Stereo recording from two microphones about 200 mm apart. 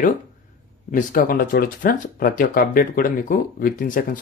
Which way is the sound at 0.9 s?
45° left (ahead or behind).